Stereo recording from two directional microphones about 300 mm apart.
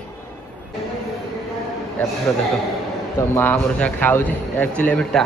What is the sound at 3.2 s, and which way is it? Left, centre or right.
Speech, centre.